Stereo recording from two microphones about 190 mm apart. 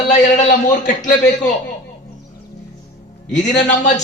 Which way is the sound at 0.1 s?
40° left (ahead or behind).